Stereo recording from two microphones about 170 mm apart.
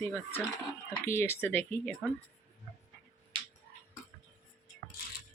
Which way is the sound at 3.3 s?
30° right (ahead or behind).